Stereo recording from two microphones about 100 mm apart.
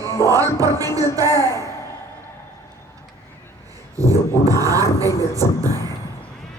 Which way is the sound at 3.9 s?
35° right (ahead or behind).